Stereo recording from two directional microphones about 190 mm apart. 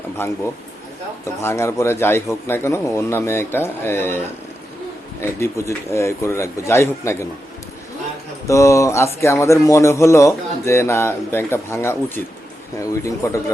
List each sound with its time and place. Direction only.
0.2 s a man's voice: 15° left (ahead or behind)
8.4 s a man's voice: 15° left (ahead or behind)